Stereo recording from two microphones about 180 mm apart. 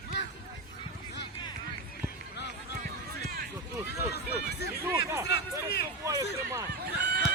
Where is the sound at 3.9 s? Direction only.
65° left (ahead or behind).